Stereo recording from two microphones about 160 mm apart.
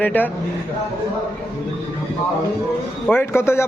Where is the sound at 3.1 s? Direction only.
15° left (ahead or behind).